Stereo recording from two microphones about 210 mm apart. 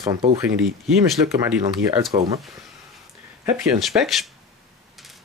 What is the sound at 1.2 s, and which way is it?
Speech, 15° right (ahead or behind).